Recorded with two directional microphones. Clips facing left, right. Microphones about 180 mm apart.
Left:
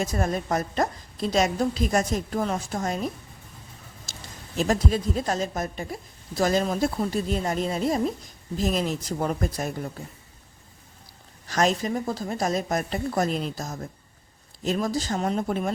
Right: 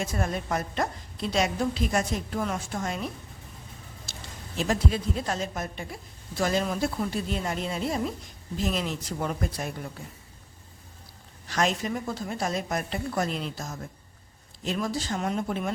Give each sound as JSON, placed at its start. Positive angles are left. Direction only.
{"t": 0.0, "sound": "a woman's voice", "side_deg": 40}
{"t": 11.4, "sound": "a woman's voice", "side_deg": 40}